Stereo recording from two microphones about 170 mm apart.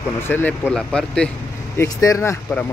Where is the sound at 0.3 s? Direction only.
10° left (ahead or behind).